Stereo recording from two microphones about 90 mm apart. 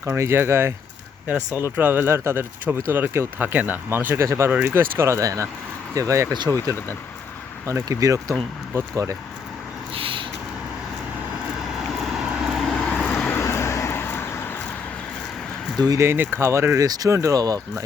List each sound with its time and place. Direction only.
0.2 s speech: 30° right (ahead or behind)
7.7 s speech: 40° right (ahead or behind)
9.9 s a sound: 80° right
11.9 s vehicle: 5° right (ahead or behind)
13.1 s vehicle: 15° left (ahead or behind)
13.4 s vehicle: 30° left (ahead or behind)
16.0 s speech: 25° right (ahead or behind)
16.8 s speech: 45° right (ahead or behind)